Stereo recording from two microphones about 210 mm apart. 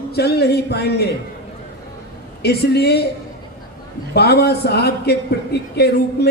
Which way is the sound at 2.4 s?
50° left (ahead or behind).